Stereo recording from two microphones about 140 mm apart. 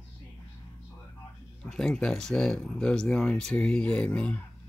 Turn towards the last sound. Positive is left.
turn(degrees=10)  # may be behind; listen again after turning